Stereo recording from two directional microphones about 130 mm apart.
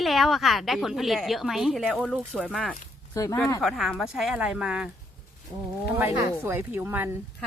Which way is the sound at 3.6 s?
Centre (ahead or behind).